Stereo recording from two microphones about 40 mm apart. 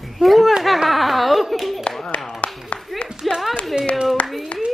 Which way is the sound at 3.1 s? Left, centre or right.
Centre.